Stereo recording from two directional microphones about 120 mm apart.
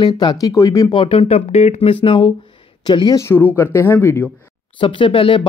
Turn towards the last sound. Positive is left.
turn(degrees=45)  # may be behind; listen again after turning